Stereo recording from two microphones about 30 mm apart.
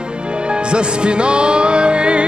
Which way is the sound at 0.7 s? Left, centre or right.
Right.